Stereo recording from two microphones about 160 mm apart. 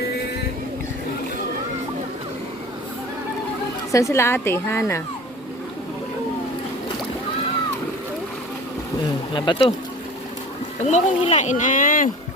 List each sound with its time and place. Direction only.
3.9 s a woman's voice: 20° left (ahead or behind)
9.3 s speech: 35° left (ahead or behind)
10.8 s speech: 45° left (ahead or behind)